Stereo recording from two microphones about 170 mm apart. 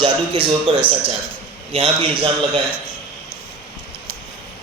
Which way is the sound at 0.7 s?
30° right (ahead or behind).